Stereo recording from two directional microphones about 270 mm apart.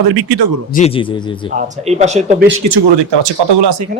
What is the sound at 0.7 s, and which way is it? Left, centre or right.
Speech, left.